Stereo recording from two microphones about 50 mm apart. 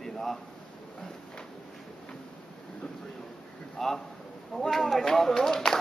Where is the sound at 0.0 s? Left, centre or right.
Centre.